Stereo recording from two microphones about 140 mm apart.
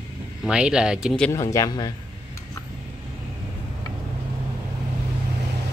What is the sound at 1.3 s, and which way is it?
Speech, 25° left (ahead or behind).